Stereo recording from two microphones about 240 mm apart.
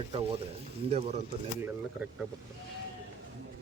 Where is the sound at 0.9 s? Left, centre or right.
Right.